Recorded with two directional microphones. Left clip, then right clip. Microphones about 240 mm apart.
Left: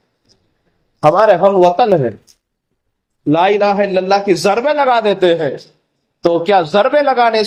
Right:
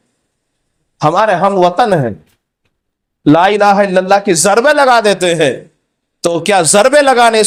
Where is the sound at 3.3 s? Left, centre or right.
Right.